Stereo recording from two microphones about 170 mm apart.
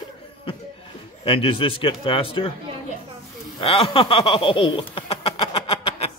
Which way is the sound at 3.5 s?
35° left (ahead or behind).